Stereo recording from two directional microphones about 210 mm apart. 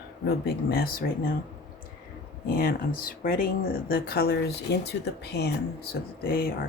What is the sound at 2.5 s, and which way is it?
Speech, 45° left (ahead or behind).